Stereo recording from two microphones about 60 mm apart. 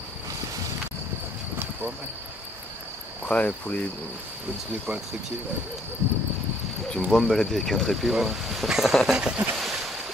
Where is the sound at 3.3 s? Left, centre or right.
Left.